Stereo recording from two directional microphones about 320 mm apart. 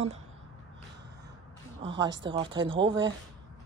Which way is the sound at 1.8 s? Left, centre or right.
Centre.